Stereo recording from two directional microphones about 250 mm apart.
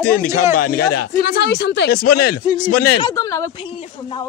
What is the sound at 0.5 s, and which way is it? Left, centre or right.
Speech, left.